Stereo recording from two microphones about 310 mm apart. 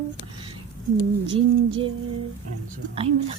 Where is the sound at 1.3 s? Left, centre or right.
Centre.